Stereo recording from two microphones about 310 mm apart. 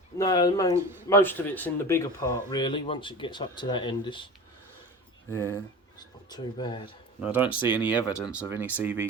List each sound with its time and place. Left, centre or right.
0.2 s speech: centre
6.2 s speech: centre
7.2 s speech: centre
7.4 s speech: centre
7.7 s speech: centre